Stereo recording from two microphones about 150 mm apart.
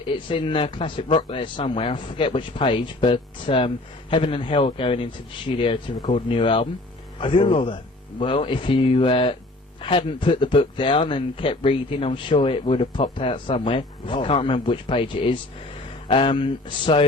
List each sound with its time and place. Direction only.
0.0 s speech: 35° left (ahead or behind)